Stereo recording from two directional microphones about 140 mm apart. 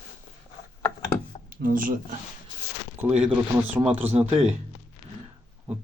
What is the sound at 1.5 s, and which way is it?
Speech, 80° right.